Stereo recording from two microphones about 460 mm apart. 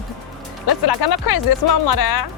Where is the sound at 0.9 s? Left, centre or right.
Left.